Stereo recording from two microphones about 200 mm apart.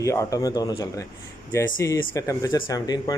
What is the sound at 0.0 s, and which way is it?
Speech, 15° left (ahead or behind).